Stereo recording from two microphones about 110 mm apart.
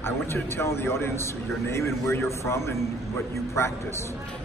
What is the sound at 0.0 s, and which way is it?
Speech, 20° left (ahead or behind).